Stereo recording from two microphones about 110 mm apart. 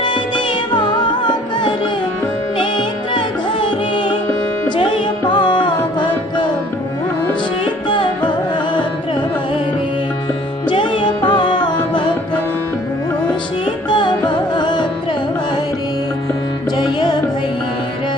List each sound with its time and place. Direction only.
0.0 s music: 45° left (ahead or behind)
5.3 s music: 45° left (ahead or behind)
7.9 s music: 45° left (ahead or behind)
10.7 s music: 45° left (ahead or behind)
13.9 s music: 45° left (ahead or behind)
16.7 s music: 40° left (ahead or behind)